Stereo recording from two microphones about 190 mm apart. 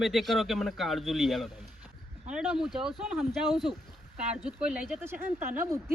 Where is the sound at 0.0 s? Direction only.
Centre (ahead or behind).